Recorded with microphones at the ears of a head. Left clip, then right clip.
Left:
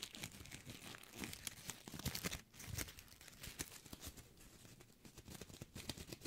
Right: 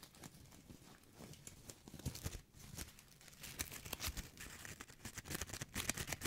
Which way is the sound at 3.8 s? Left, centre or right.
Right.